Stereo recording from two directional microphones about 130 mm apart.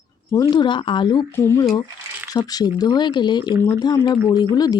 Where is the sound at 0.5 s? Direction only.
35° left (ahead or behind).